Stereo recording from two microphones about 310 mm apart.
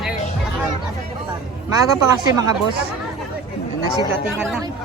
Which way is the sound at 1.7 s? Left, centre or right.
Centre.